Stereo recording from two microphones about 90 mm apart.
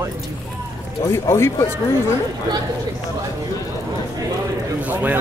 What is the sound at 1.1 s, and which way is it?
Speech, 30° left (ahead or behind).